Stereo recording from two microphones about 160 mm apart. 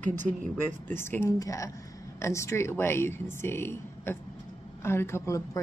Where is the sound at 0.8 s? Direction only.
15° left (ahead or behind).